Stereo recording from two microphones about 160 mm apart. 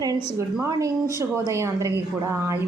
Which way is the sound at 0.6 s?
20° right (ahead or behind).